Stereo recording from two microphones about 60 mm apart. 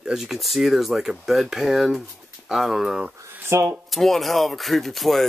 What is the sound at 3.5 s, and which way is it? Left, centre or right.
Speech, right.